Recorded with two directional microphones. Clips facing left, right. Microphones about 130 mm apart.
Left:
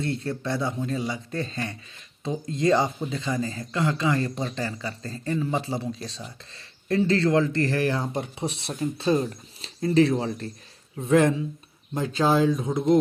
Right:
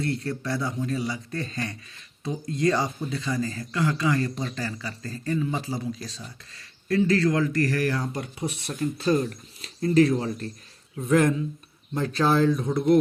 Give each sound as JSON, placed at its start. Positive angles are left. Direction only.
{"t": 0.0, "sound": "speech", "side_deg": 20}